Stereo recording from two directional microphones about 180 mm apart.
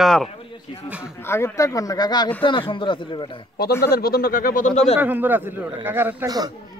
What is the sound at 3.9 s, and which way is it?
Speech, 60° left (ahead or behind).